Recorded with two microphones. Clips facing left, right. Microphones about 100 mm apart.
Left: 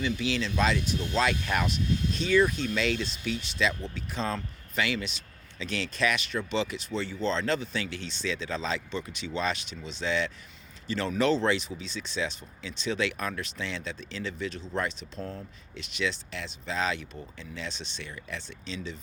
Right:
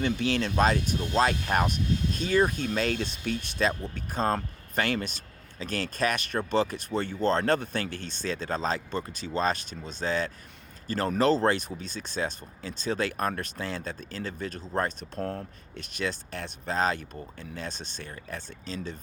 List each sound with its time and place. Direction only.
0.0 s speech: 50° right (ahead or behind)